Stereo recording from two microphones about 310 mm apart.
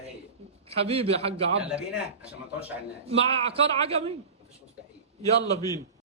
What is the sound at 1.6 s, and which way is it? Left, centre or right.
Speech, centre.